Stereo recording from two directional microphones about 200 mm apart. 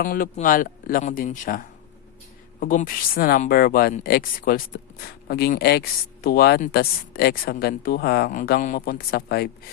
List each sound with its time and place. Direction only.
0.0 s speech: 45° left (ahead or behind)